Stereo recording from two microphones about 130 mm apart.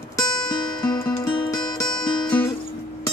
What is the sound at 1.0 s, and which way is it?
Music, 20° left (ahead or behind).